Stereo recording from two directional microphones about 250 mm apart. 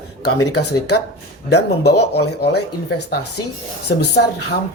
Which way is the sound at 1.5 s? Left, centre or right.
Left.